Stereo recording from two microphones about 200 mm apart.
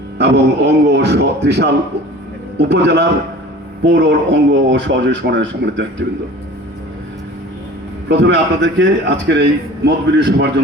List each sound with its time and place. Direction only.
0.2 s a man's voice: 60° right (ahead or behind)
8.2 s a man's voice: 65° right (ahead or behind)